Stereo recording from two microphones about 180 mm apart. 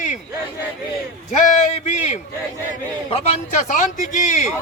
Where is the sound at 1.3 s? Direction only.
45° left (ahead or behind).